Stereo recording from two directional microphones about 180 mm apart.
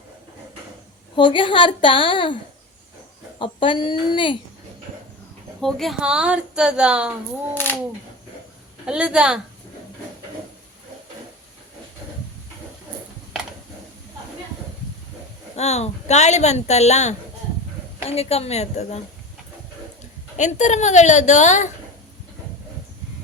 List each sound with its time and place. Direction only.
1.1 s a woman's voice: 25° left (ahead or behind)
5.5 s a woman's voice: centre (ahead or behind)
7.5 s speech: 10° left (ahead or behind)
8.9 s a woman's voice: 5° right (ahead or behind)
15.5 s speech: 35° left (ahead or behind)
20.3 s speech: 40° left (ahead or behind)